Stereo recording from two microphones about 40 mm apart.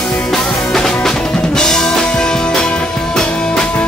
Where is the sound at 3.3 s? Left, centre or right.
Centre.